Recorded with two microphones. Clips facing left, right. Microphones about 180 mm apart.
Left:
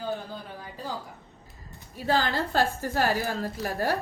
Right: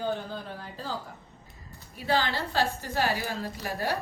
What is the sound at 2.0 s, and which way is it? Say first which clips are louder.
A woman's voice: left 2 dB; 45° left (ahead or behind).